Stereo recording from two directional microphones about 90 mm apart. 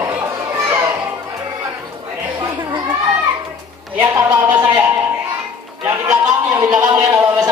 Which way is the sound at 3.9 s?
25° right (ahead or behind).